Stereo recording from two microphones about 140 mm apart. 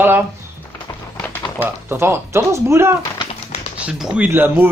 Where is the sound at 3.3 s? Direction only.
50° left (ahead or behind).